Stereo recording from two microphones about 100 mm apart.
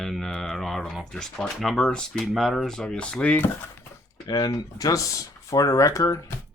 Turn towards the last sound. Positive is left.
turn(degrees=35)  # may be behind; listen again after turning